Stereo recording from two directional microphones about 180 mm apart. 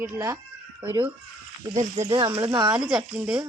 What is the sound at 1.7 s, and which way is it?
Speech, 40° right (ahead or behind).